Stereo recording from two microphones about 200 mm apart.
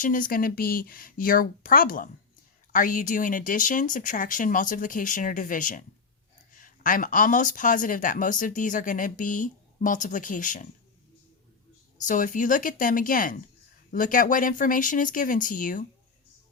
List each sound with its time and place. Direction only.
0.0 s speech: 40° left (ahead or behind)
12.0 s speech: 40° left (ahead or behind)